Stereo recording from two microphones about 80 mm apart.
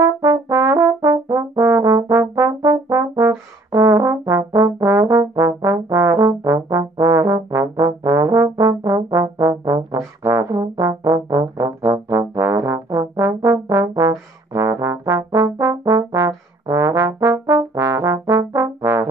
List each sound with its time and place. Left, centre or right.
0.0 s brass instrument: right
4.6 s trombone: right
6.8 s brass instrument: right